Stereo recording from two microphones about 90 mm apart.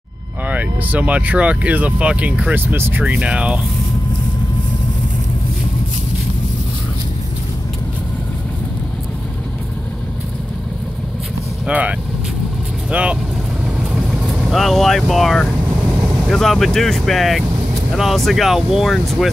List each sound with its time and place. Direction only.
0.5 s speech: 15° right (ahead or behind)
11.6 s speech: 15° right (ahead or behind)
12.9 s speech: 10° right (ahead or behind)
13.7 s vehicle: 10° right (ahead or behind)
16.3 s speech: 5° left (ahead or behind)